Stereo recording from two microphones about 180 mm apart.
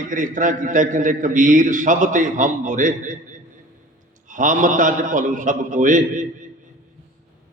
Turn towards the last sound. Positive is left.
turn(degrees=-45)  # may be behind; listen again after turning